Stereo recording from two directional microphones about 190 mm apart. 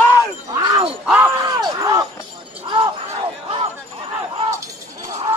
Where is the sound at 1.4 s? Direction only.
20° right (ahead or behind).